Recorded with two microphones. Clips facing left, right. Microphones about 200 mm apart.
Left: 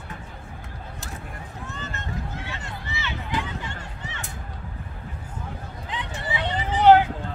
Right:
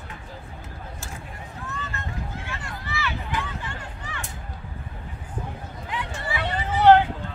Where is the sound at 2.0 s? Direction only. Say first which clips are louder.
Left 1 dB; 20° left (ahead or behind).